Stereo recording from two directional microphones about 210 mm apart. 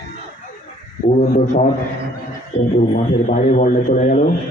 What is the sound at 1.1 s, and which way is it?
Speech, 30° left (ahead or behind).